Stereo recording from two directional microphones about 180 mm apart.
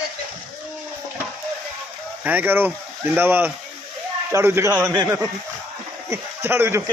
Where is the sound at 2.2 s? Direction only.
10° right (ahead or behind).